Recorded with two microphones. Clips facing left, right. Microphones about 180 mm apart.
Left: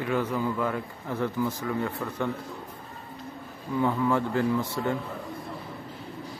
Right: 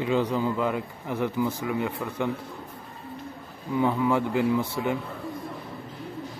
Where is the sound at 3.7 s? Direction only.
15° right (ahead or behind).